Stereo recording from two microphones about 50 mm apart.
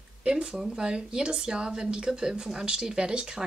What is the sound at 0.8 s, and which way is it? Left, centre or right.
Speech, centre.